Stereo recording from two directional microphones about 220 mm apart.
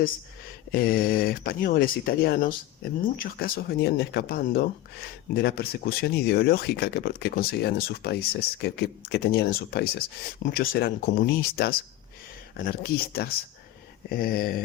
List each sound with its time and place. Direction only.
0.7 s speech: 40° left (ahead or behind)